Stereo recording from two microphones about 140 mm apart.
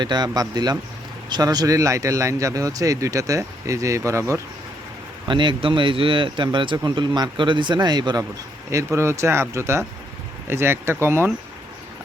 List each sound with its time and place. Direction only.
0.0 s speech: 30° right (ahead or behind)
5.3 s speech: 35° right (ahead or behind); by 11.3 s 15° right (ahead or behind)